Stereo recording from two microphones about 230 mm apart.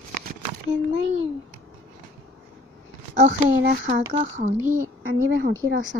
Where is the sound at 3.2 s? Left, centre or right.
Right.